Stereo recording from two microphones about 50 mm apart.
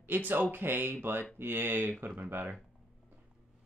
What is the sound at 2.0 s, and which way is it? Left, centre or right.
Speech, right.